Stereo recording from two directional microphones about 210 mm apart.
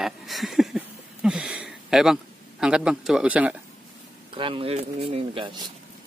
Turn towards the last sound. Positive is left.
turn(degrees=-25)  # may be behind; listen again after turning